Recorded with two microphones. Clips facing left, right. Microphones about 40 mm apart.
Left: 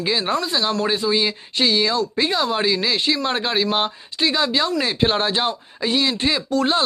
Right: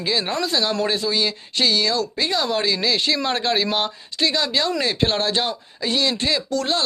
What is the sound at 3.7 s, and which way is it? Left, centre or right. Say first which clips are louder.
Speech: left 1 dB; centre.